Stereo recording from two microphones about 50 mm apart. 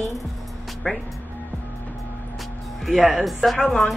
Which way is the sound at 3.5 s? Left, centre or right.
Centre.